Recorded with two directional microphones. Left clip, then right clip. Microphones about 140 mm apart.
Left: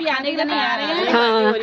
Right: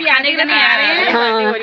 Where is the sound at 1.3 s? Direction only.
15° left (ahead or behind).